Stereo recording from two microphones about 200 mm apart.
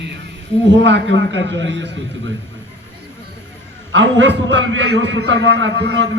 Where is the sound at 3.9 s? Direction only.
65° right (ahead or behind).